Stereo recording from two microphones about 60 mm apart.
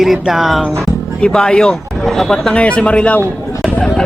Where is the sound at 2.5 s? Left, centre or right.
Left.